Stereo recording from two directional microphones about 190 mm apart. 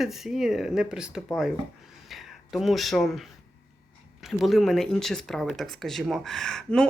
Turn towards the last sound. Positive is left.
turn(degrees=5)  # may be behind; listen again after turning